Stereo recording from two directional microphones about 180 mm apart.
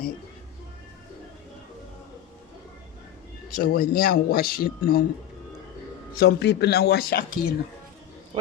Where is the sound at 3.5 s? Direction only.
55° left (ahead or behind).